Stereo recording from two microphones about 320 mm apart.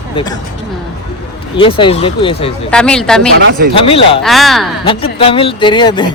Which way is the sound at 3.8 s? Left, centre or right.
Centre.